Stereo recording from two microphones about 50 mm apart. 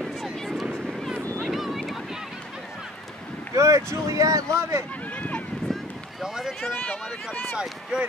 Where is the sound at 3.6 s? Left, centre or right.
Right.